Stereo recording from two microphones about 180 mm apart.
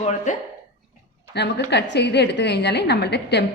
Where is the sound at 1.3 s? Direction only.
70° left (ahead or behind).